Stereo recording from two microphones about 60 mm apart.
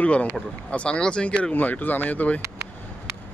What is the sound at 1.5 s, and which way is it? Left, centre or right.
Speech, left.